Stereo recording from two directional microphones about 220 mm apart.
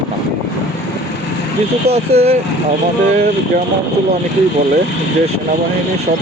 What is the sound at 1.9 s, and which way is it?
Speech, 30° right (ahead or behind).